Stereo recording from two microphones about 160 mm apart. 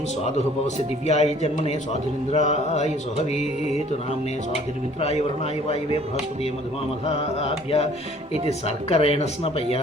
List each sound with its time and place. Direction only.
1.0 s a sound: 45° left (ahead or behind)
4.5 s speech: 40° left (ahead or behind)
7.0 s speech: 40° left (ahead or behind)